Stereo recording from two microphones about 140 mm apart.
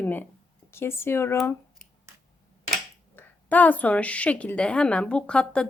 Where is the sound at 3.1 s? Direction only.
10° left (ahead or behind).